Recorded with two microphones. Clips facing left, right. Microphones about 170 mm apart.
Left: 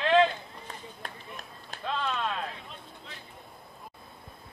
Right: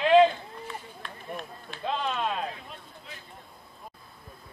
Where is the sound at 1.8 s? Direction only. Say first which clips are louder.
Right 2 dB; 20° right (ahead or behind).